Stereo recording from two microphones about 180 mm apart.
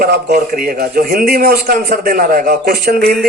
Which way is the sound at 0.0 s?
55° right (ahead or behind).